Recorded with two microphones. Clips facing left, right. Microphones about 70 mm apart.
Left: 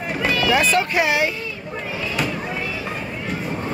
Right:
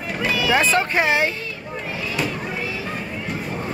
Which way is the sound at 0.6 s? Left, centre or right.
Right.